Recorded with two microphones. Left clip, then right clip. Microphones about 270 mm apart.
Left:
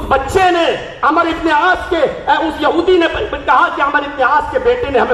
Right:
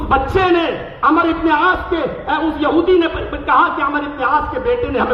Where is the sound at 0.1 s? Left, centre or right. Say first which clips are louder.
Left 2 dB; centre.